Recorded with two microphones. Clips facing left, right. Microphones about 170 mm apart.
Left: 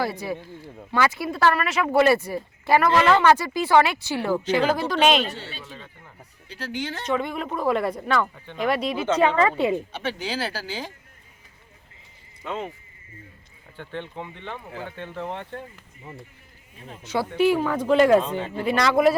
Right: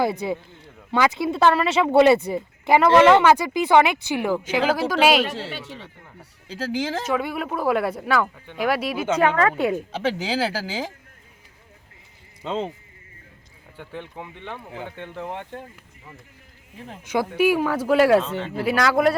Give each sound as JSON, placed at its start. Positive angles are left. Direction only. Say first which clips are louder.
{"t": 0.0, "sound": "speech", "louder": "right 4 dB", "side_deg": -20}
{"t": 5.3, "sound": "speech", "louder": "right 6 dB", "side_deg": -90}
{"t": 7.0, "sound": "speech", "louder": "right 1 dB", "side_deg": -5}
{"t": 9.9, "sound": "speech", "louder": "right 5 dB", "side_deg": -90}
{"t": 12.4, "sound": "speech", "louder": "right 4 dB", "side_deg": -25}
{"t": 13.7, "sound": "speech", "louder": "left 2 dB", "side_deg": -10}
{"t": 17.0, "sound": "speech", "louder": "right 1 dB", "side_deg": -10}
{"t": 18.2, "sound": "speech", "louder": "even", "side_deg": 15}
{"t": 18.5, "sound": "speech", "louder": "right 1 dB", "side_deg": -5}